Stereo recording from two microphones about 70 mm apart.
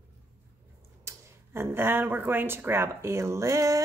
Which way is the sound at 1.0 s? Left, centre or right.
Right.